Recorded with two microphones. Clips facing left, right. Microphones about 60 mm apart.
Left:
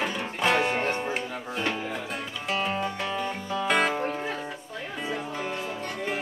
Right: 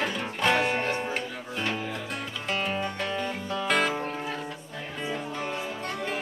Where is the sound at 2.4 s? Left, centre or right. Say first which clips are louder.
Left 2 dB; centre.